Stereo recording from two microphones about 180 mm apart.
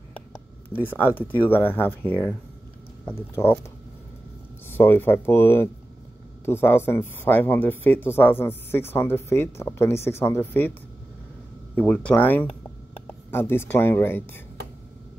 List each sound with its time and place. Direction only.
0.7 s speech: 10° left (ahead or behind)
4.6 s speech: 10° left (ahead or behind)
11.7 s speech: 10° left (ahead or behind)